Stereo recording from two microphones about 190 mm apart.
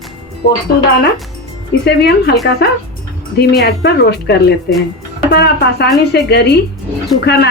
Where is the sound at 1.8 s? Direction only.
60° left (ahead or behind).